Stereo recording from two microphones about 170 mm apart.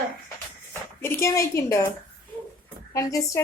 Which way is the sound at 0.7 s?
15° left (ahead or behind).